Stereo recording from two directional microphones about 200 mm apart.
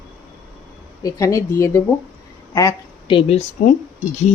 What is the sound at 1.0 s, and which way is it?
Speech, 15° left (ahead or behind).